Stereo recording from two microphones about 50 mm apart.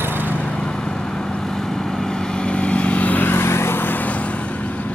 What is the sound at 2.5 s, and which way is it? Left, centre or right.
Vehicle, left.